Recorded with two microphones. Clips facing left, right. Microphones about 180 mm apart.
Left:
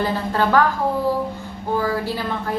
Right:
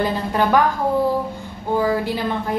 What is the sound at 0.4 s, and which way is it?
Speech, 15° right (ahead or behind).